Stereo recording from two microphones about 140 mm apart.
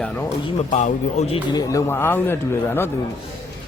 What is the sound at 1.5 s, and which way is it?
A man's voice, 20° left (ahead or behind).